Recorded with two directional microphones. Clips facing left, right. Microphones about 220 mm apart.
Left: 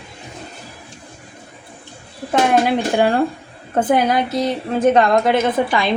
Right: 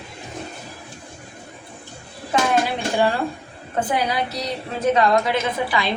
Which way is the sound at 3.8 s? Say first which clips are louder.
Left 6 dB; 50° left (ahead or behind).